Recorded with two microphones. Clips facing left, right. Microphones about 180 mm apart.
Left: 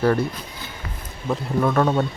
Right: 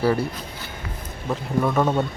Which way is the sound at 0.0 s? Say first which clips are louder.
Left 1 dB; 10° right (ahead or behind).